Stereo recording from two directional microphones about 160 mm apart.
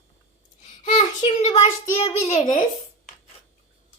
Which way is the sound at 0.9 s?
45° left (ahead or behind).